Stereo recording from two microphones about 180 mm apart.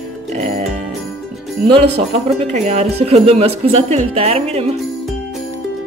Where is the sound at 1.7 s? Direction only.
30° right (ahead or behind).